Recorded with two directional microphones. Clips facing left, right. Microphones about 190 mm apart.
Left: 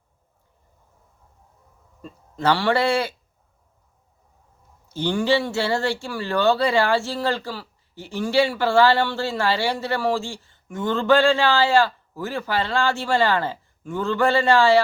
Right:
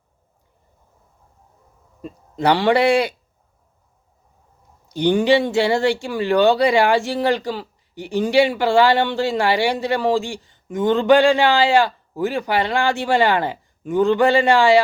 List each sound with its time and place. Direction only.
2.0 s speech: 15° right (ahead or behind)
4.9 s speech: 15° right (ahead or behind)